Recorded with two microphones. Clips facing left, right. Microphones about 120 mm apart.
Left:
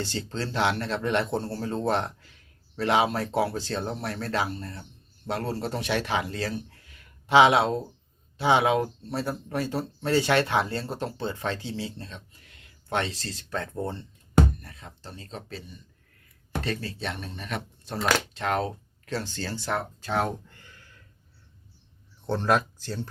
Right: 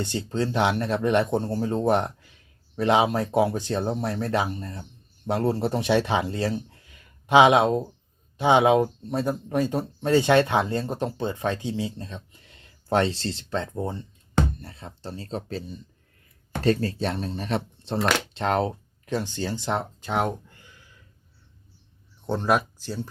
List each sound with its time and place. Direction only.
0.0 s speech: 20° right (ahead or behind)
13.7 s speech: 15° right (ahead or behind)
14.6 s speech: 30° right (ahead or behind)
20.7 s a sound: 5° right (ahead or behind)
22.3 s speech: 10° right (ahead or behind)